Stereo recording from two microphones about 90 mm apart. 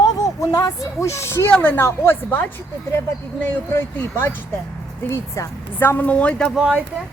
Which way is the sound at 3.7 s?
30° left (ahead or behind).